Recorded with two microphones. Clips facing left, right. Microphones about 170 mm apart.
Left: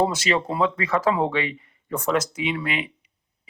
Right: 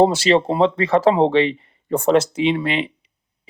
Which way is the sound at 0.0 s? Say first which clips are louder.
Right 8 dB; 30° right (ahead or behind).